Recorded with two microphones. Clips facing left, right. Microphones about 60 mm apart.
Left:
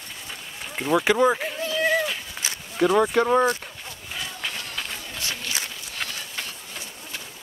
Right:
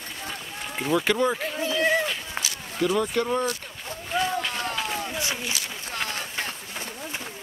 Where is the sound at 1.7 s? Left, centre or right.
Centre.